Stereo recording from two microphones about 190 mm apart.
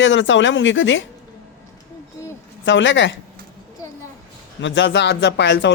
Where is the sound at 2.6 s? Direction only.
75° left (ahead or behind).